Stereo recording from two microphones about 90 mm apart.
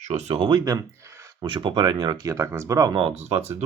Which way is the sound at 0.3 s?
70° right (ahead or behind).